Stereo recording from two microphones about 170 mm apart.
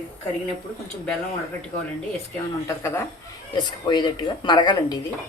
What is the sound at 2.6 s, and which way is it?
Speech, 15° left (ahead or behind).